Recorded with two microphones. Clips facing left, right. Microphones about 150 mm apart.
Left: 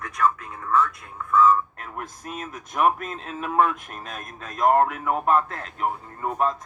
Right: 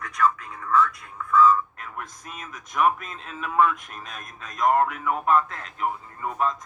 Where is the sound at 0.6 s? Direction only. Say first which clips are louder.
Even; 40° left (ahead or behind).